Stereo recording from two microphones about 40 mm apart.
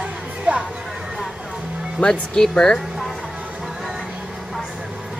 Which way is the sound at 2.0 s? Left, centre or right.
Centre.